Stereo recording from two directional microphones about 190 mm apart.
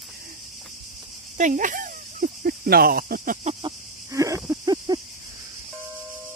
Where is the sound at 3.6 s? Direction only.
15° right (ahead or behind).